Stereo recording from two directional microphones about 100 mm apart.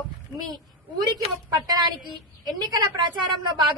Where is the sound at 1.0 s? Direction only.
45° right (ahead or behind).